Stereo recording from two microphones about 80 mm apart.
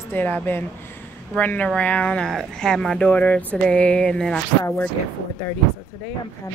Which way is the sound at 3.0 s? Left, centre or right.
Centre.